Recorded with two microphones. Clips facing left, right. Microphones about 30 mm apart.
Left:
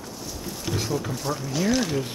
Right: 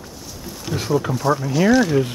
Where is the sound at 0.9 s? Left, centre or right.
Centre.